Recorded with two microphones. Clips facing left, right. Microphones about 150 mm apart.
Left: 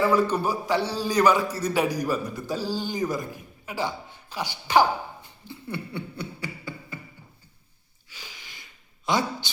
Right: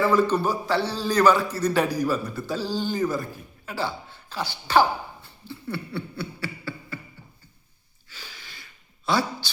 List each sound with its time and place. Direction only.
0.0 s a man's voice: 10° left (ahead or behind)
8.1 s a sound: 15° left (ahead or behind)
9.0 s speech: 20° left (ahead or behind)